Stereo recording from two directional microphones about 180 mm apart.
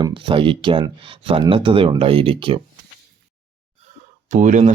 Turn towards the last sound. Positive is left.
turn(degrees=-45)  # may be behind; listen again after turning